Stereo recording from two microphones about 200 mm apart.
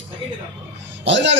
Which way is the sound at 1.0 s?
65° right (ahead or behind).